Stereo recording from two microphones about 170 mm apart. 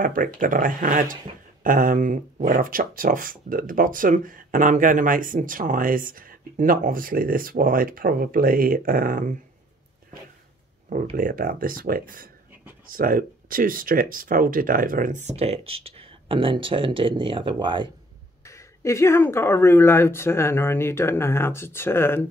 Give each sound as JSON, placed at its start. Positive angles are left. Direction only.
{"t": 0.0, "sound": "speech", "side_deg": -55}
{"t": 10.9, "sound": "speech", "side_deg": -55}
{"t": 18.4, "sound": "speech", "side_deg": 15}